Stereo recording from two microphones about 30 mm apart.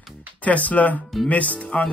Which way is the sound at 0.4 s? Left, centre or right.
Left.